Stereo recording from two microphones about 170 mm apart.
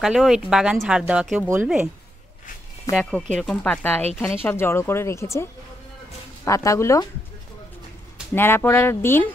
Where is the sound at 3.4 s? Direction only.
5° left (ahead or behind).